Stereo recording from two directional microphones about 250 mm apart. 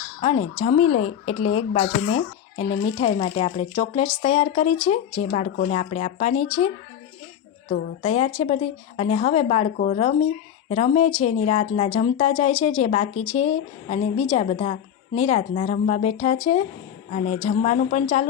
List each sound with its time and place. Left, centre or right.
0.2 s speech: left
8.0 s speech: left